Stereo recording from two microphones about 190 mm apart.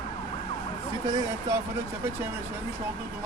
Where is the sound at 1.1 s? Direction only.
20° right (ahead or behind).